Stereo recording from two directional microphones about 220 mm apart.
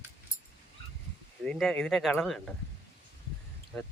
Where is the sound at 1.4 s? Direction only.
5° left (ahead or behind).